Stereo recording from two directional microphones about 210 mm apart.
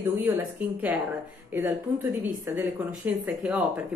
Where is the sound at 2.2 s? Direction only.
10° right (ahead or behind).